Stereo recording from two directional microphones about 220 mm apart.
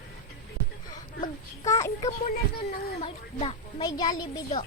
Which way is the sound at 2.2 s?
30° left (ahead or behind).